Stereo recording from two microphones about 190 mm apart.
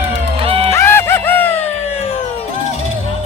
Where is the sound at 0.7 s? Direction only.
15° left (ahead or behind).